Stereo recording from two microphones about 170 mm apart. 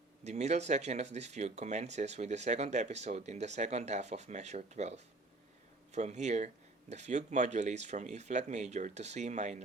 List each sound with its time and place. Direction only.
0.3 s speech: 40° right (ahead or behind)